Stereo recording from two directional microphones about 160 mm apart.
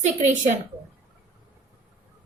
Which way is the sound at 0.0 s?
50° right (ahead or behind).